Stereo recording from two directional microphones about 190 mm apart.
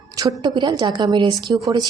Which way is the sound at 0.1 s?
20° right (ahead or behind).